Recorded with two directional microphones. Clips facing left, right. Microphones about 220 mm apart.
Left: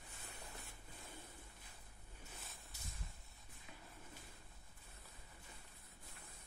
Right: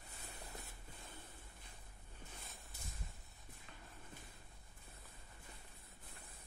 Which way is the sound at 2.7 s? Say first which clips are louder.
Right 2 dB; 55° right (ahead or behind).